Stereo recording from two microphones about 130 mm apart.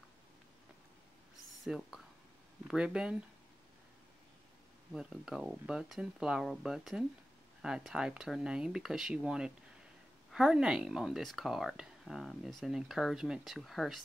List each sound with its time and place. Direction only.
1.6 s speech: centre (ahead or behind)
4.9 s speech: 5° right (ahead or behind)